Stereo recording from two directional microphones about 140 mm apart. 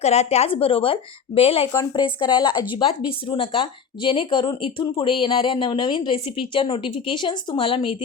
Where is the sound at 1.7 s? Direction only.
30° left (ahead or behind).